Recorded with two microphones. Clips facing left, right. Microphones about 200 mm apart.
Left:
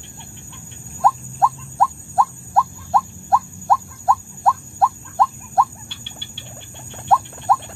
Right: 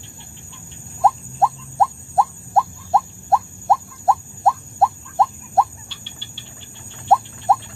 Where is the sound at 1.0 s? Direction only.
25° right (ahead or behind).